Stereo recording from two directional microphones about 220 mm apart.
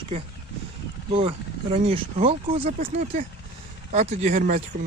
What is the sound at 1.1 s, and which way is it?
Speech, 25° right (ahead or behind).